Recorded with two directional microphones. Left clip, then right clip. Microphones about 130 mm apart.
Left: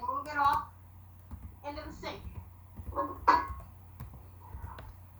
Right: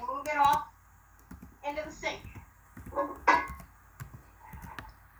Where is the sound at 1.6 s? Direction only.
35° right (ahead or behind).